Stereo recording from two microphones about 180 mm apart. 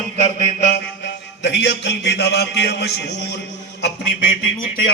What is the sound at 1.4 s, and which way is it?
A man's voice, 75° left (ahead or behind).